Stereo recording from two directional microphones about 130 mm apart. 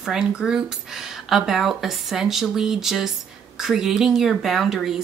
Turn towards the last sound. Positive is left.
turn(degrees=0)  # may be behind; listen again after turning